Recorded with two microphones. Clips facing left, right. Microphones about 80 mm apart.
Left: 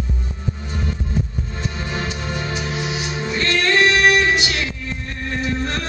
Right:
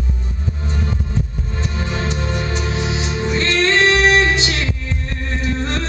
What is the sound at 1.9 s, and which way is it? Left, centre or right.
Music, centre.